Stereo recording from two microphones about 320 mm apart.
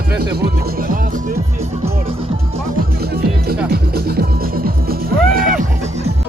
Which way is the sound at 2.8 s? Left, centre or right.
Right.